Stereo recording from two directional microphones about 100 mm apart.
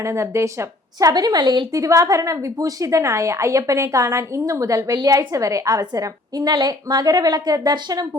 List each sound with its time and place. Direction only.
0.0 s a woman's voice: 30° right (ahead or behind)
1.7 s a woman's voice: 30° right (ahead or behind)